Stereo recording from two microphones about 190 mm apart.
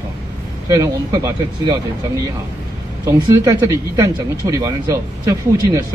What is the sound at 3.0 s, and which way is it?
Speech, 15° right (ahead or behind).